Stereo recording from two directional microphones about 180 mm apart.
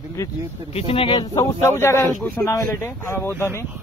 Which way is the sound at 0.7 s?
30° left (ahead or behind).